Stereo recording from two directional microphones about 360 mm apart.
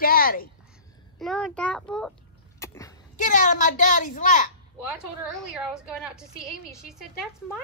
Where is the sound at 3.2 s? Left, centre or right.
Left.